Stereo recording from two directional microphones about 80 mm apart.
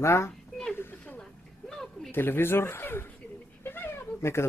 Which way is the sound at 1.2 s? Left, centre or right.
Centre.